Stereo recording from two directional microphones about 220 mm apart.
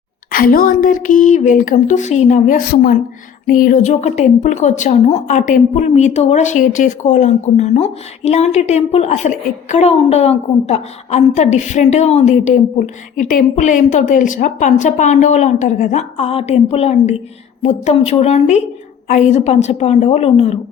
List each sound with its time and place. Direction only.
0.3 s a woman's voice: 40° left (ahead or behind)